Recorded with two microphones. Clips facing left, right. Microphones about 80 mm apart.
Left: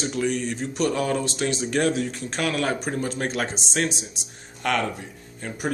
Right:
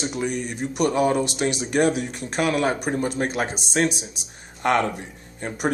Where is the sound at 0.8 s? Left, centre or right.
Right.